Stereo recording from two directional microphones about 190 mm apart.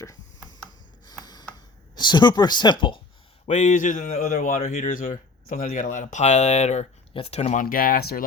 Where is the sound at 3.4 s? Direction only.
40° left (ahead or behind).